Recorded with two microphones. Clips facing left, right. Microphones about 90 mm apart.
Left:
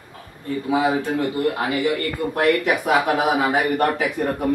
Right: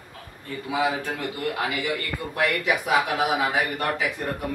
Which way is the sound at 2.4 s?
50° left (ahead or behind).